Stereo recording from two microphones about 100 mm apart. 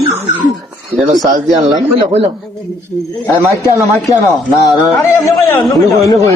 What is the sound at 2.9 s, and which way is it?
Speech, centre (ahead or behind).